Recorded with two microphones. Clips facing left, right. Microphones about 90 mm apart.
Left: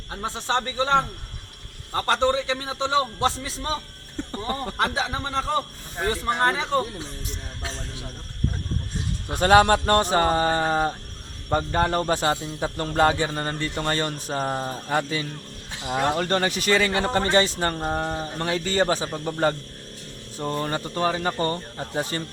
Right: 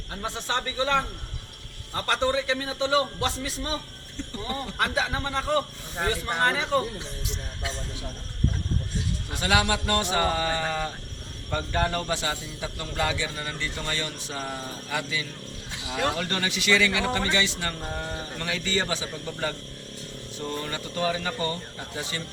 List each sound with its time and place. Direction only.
0.1 s a man's voice: 30° left (ahead or behind)
2.0 s a man's voice: 30° left (ahead or behind)
4.2 s speech: 50° left (ahead or behind)
4.8 s a man's voice: 30° left (ahead or behind)
9.3 s a man's voice: 45° left (ahead or behind)